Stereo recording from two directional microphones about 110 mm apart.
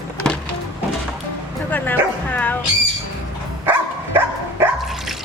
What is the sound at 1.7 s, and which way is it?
Speech, 15° left (ahead or behind).